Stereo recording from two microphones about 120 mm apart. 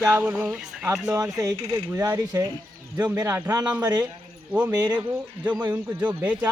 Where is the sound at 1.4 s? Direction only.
30° right (ahead or behind).